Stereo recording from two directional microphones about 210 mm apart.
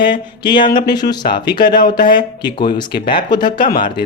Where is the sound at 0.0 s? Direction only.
20° left (ahead or behind).